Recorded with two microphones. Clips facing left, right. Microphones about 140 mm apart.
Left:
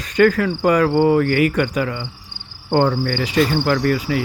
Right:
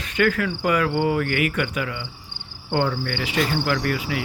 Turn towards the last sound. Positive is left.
turn(degrees=40)  # may be behind; listen again after turning